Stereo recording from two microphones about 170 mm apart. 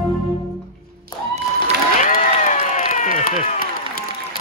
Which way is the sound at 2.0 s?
50° left (ahead or behind).